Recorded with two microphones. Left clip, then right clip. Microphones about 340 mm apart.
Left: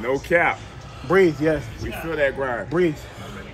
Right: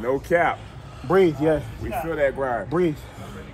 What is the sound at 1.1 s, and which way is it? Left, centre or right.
Speech, right.